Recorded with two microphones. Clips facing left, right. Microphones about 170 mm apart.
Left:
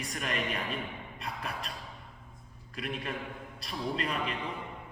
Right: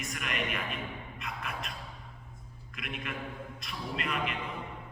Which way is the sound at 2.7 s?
35° left (ahead or behind).